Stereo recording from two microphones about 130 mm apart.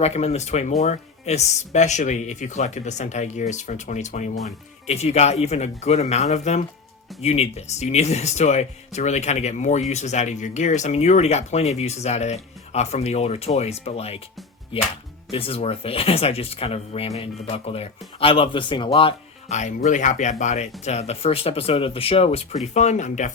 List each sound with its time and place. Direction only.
0.0 s speech: 55° left (ahead or behind)
19.5 s speech: 65° left (ahead or behind)